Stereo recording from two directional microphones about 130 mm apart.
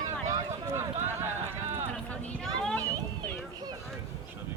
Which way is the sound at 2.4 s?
5° left (ahead or behind).